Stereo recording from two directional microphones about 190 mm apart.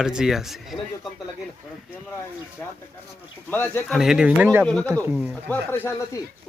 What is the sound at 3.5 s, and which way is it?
Speech, 10° left (ahead or behind).